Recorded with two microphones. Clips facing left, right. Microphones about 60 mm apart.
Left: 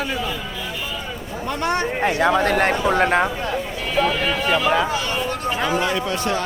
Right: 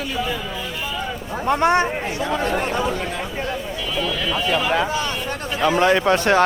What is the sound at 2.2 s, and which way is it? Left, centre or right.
Speech, left.